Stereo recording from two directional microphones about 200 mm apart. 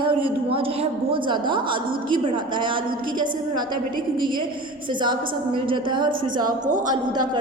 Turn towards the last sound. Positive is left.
turn(degrees=-20)  # may be behind; listen again after turning